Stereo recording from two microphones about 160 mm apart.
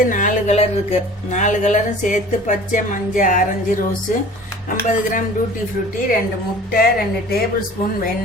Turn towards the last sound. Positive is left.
turn(degrees=80)